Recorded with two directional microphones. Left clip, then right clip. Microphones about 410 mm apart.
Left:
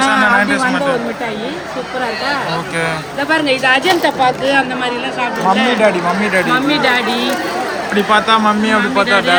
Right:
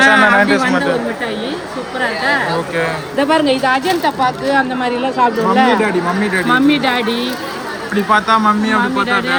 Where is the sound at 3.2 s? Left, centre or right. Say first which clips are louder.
Left 1 dB; centre.